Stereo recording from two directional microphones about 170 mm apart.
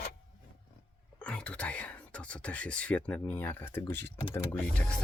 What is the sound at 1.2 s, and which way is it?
Whispering, 5° left (ahead or behind).